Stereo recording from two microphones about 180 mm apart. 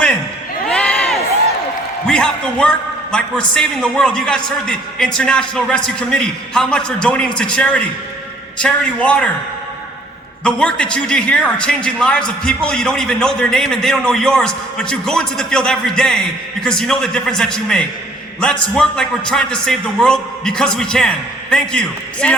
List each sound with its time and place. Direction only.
0.7 s crowd: 5° left (ahead or behind)
2.0 s a man's voice: 5° left (ahead or behind)
10.4 s a man's voice: 5° left (ahead or behind)